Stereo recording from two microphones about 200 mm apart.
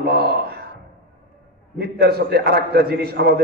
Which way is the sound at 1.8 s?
50° right (ahead or behind).